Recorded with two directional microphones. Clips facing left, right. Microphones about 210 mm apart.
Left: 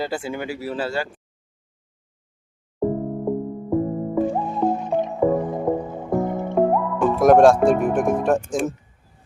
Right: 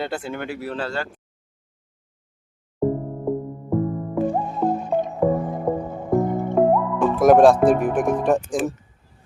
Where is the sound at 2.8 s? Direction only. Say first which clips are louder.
Even; centre (ahead or behind).